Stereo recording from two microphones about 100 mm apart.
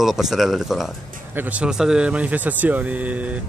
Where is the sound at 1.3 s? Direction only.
15° right (ahead or behind).